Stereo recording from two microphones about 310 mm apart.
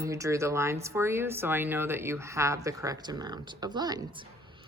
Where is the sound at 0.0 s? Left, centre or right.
Centre.